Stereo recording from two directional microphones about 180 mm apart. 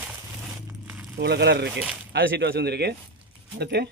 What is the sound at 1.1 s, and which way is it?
Speech, 65° right (ahead or behind).